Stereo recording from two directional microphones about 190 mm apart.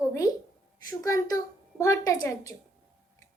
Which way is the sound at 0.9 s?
15° left (ahead or behind).